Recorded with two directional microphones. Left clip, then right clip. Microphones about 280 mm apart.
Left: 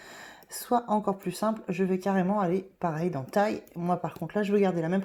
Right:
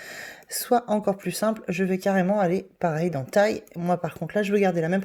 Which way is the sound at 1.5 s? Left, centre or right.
Right.